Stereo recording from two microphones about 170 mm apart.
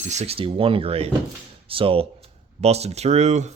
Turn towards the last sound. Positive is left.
turn(degrees=-40)  # may be behind; listen again after turning